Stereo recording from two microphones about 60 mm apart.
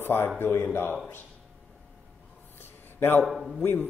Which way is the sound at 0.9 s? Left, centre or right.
Left.